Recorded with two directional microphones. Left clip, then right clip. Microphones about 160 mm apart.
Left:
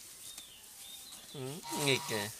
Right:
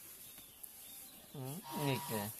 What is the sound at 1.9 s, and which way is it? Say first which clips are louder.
Speech: left 8 dB; 10° left (ahead or behind).